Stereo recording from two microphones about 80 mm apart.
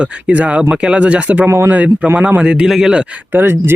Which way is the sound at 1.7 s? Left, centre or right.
Centre.